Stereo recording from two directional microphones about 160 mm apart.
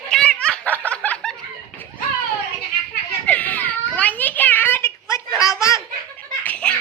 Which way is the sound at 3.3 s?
10° left (ahead or behind).